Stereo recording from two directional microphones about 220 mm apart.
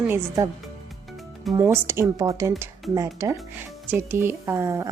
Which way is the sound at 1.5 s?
10° right (ahead or behind).